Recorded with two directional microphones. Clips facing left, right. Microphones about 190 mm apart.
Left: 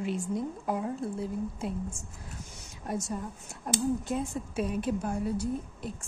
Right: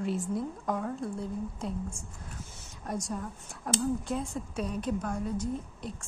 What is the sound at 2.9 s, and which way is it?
A woman's voice, 5° left (ahead or behind).